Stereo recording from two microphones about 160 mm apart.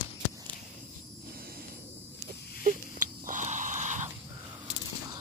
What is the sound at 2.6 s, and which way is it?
Wheeze, 55° right (ahead or behind).